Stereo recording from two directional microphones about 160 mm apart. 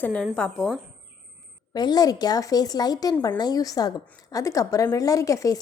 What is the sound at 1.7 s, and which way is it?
A woman's voice, 25° left (ahead or behind).